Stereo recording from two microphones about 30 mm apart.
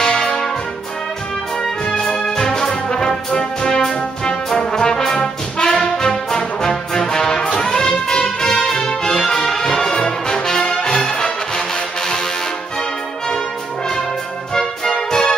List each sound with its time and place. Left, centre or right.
0.0 s brass instrument: left
1.6 s music: centre
3.9 s brass instrument: left
7.0 s music: centre
8.8 s music: left
9.3 s brass instrument: centre
14.5 s music: centre